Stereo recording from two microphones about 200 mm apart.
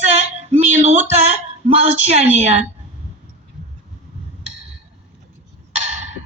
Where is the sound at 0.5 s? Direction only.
35° right (ahead or behind).